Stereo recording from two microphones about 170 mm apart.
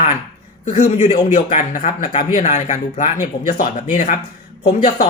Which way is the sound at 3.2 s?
55° left (ahead or behind).